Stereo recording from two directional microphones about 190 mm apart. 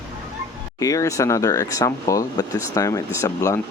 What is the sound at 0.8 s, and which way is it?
Speech, 15° left (ahead or behind).